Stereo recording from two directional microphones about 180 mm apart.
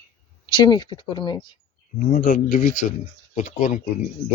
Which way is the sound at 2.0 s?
45° left (ahead or behind).